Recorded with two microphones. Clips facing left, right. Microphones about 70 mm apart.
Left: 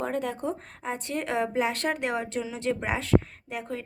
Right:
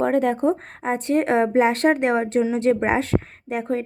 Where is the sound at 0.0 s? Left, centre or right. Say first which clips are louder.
Right 10 dB; right.